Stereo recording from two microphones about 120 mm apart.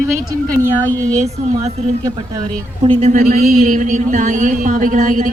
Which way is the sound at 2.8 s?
85° right.